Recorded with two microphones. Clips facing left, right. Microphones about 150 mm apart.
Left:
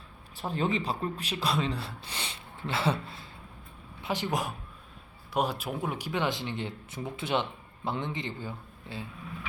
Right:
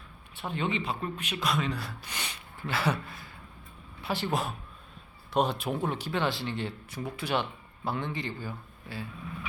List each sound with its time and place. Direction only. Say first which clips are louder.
0.3 s speech: left 2 dB; 35° left (ahead or behind)